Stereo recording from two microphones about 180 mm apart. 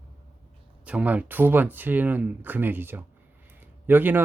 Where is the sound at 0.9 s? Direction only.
10° right (ahead or behind).